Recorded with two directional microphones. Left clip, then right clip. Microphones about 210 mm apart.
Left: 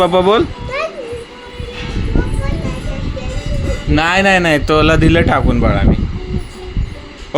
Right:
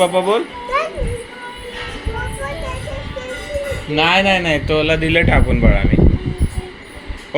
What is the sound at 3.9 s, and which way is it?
Speech, 40° left (ahead or behind).